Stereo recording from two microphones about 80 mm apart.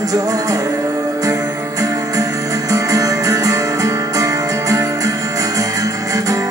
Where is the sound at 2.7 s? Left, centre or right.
Right.